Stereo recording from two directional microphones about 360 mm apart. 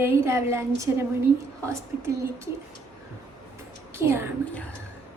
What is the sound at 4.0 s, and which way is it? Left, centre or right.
Speech, centre.